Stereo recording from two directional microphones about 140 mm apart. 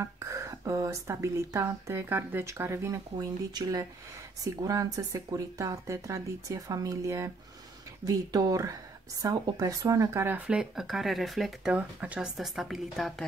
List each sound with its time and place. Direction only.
0.0 s speech: 20° right (ahead or behind); by 13.1 s centre (ahead or behind)